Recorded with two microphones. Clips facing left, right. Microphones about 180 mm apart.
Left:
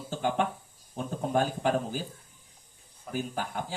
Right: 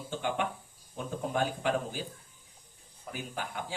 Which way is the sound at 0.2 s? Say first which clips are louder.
Left 5 dB; 40° left (ahead or behind).